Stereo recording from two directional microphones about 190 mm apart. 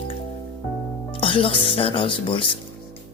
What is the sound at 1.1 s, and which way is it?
A woman's voice, 30° left (ahead or behind).